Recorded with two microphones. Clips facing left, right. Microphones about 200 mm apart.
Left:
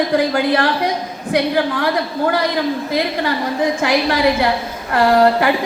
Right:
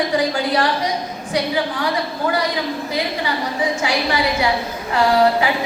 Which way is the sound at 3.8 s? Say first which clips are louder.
Left 6 dB; 55° left (ahead or behind).